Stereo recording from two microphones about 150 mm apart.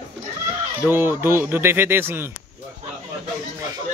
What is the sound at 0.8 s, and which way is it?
Speech, 15° right (ahead or behind).